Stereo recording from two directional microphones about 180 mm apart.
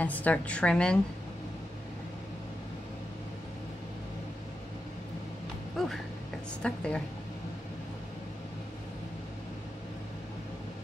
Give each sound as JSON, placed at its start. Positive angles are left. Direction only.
{"t": 0.0, "sound": "a woman's voice", "side_deg": 10}
{"t": 5.8, "sound": "a woman's voice", "side_deg": 0}